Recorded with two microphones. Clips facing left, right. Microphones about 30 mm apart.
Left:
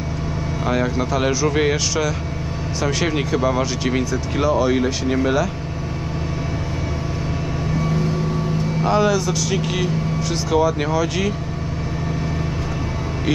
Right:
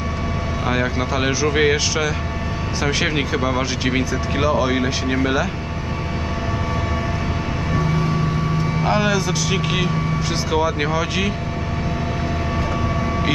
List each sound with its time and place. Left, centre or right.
0.6 s speech: centre
8.8 s speech: centre